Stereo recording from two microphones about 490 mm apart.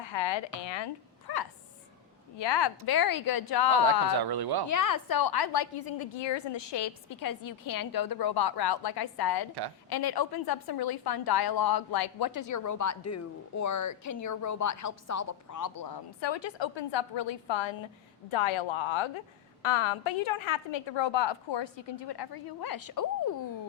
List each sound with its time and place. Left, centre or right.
0.0 s a woman's voice: left
1.3 s a sound: left
2.4 s a woman's voice: left
4.1 s speech: right
4.7 s a woman's voice: left
19.6 s a woman's voice: left